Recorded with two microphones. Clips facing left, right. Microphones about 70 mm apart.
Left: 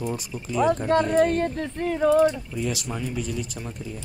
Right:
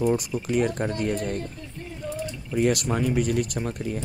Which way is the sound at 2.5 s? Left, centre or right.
Right.